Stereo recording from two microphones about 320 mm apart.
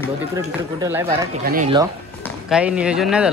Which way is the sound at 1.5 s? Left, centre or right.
Right.